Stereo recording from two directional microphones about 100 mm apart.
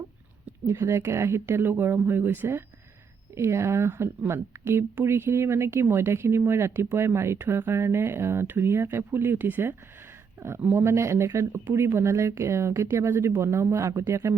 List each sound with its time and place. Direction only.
0.7 s speech: 25° right (ahead or behind)